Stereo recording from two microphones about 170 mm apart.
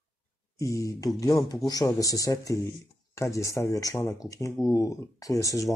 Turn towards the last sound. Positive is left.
turn(degrees=20)  # may be behind; listen again after turning